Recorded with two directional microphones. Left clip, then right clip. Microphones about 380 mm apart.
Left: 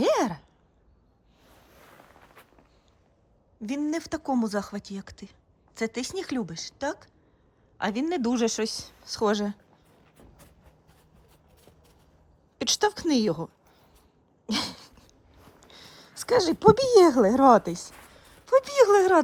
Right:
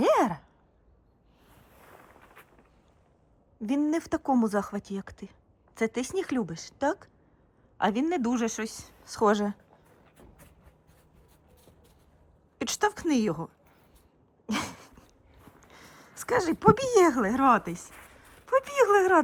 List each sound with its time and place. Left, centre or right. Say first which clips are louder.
0.0 s sigh: right 1 dB; centre
3.6 s speech: right 2 dB; centre
10.2 s a sound: left 2 dB; centre
12.5 s a woman's voice: left 3 dB; centre
14.4 s a sound: left 3 dB; centre
15.7 s speech: left 4 dB; centre